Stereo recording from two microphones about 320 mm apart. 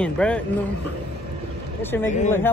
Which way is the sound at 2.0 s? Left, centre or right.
Left.